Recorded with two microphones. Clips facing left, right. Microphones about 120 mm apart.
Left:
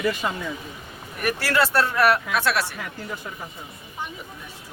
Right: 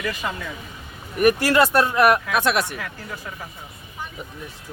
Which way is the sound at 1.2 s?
20° right (ahead or behind).